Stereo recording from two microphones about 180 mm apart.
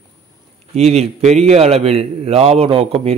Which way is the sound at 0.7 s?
35° right (ahead or behind).